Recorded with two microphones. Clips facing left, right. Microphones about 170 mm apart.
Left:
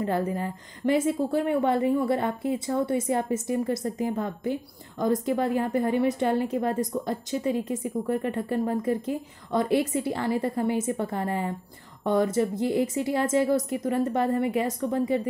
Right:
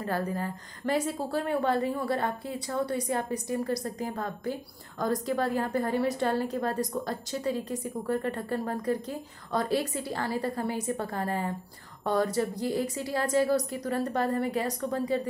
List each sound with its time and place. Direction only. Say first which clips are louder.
0.0 s a woman's voice: left 4 dB; 20° left (ahead or behind)